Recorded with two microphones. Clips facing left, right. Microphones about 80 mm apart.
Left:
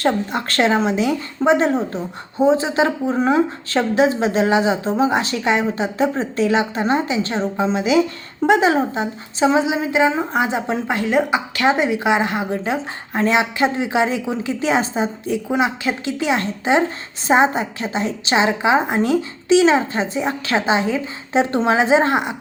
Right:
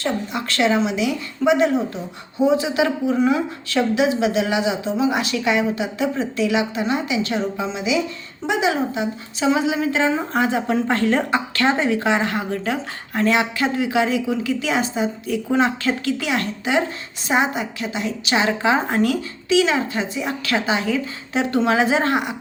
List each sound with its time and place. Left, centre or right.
0.0 s a woman's voice: left
15.4 s a woman's voice: centre